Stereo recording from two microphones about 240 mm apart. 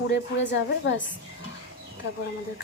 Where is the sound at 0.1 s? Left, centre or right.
Left.